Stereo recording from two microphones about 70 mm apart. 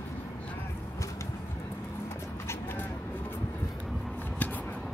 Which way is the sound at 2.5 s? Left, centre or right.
Left.